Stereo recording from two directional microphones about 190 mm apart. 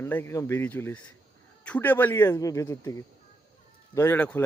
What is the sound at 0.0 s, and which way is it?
Speech, 10° left (ahead or behind).